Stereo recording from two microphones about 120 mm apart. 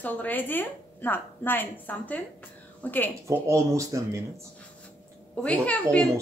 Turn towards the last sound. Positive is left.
turn(degrees=10)  # may be behind; listen again after turning